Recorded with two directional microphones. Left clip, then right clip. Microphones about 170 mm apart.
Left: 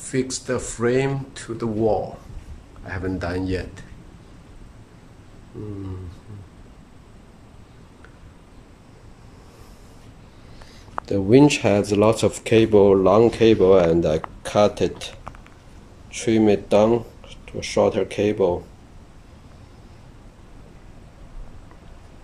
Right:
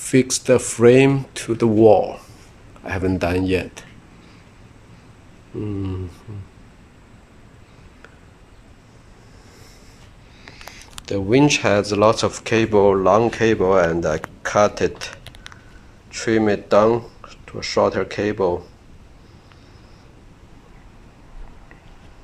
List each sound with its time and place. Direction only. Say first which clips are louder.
0.0 s speech: right 7 dB; 20° right (ahead or behind)
10.7 s speech: left 1 dB; 20° left (ahead or behind)